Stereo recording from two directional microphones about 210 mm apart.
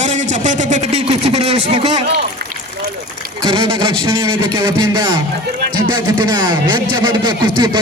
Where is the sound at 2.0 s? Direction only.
50° right (ahead or behind).